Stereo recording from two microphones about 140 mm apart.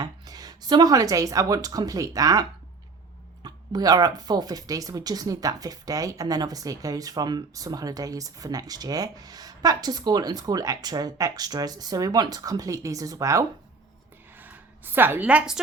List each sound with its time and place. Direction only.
0.0 s speech: 30° right (ahead or behind)
14.3 s a woman's voice: 15° right (ahead or behind)